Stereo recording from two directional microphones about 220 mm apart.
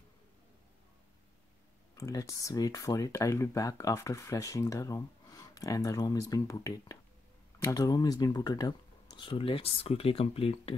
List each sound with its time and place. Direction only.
2.0 s speech: 15° left (ahead or behind)